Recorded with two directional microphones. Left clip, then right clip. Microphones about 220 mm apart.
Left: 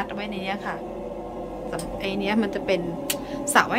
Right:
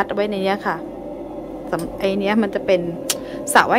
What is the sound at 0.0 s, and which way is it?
A woman's voice, 20° right (ahead or behind).